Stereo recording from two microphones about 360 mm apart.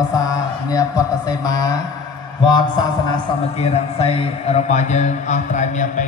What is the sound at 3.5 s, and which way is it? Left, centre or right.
A man's voice, centre.